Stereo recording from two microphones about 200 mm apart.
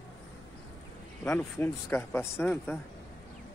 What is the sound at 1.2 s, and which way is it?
Speech, 10° left (ahead or behind).